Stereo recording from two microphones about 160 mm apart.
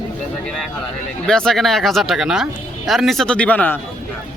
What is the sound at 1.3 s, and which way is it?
Speech, 5° left (ahead or behind).